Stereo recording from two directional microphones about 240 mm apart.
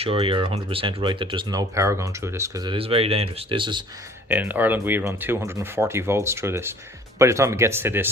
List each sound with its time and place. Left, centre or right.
0.0 s speech: right
4.3 s speech: centre